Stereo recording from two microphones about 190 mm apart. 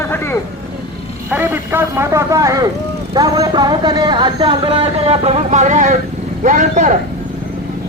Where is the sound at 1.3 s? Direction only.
10° right (ahead or behind); by 7.0 s 40° right (ahead or behind).